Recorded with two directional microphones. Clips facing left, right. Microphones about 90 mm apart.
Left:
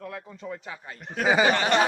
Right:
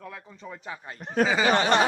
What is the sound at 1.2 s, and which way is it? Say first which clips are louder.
Battle cry: left 4 dB; 20° left (ahead or behind).